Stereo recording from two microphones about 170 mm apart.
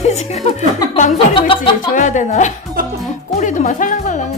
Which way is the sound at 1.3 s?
30° left (ahead or behind).